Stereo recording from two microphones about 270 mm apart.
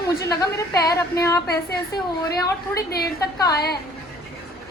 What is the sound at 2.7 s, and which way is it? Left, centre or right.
A woman's voice, left.